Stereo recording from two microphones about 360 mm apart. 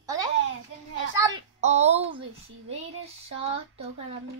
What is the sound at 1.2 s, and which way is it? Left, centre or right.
Speech, centre.